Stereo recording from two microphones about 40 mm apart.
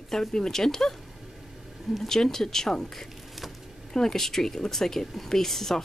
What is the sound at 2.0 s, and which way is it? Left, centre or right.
Speech, centre.